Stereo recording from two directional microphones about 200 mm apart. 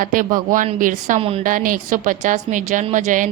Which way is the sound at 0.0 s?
45° right (ahead or behind).